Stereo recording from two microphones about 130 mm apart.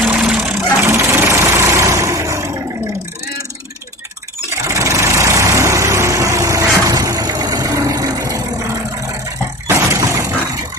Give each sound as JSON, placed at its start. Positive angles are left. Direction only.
{"t": 0.1, "sound": "vehicle", "side_deg": -5}
{"t": 0.8, "sound": "vehicle", "side_deg": -20}
{"t": 4.6, "sound": "vehicle", "side_deg": -25}
{"t": 9.6, "sound": "a sound", "side_deg": -20}